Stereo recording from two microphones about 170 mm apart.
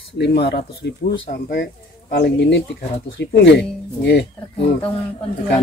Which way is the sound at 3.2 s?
85° left.